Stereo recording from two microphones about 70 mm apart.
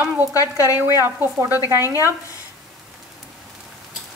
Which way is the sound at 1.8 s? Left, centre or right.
Left.